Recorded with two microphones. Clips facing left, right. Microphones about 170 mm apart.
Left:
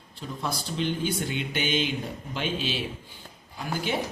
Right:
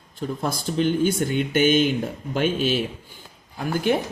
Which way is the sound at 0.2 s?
50° right (ahead or behind).